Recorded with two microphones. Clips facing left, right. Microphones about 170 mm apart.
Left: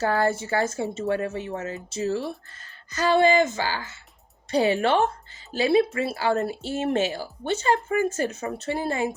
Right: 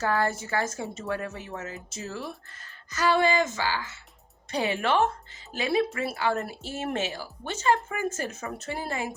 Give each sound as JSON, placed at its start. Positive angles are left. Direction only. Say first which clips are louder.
{"t": 0.0, "sound": "speech", "louder": "left 4 dB", "side_deg": 30}